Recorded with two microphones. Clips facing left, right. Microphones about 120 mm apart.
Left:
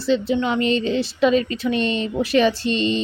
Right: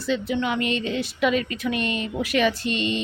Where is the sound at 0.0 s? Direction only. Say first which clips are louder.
Left 5 dB; 30° left (ahead or behind).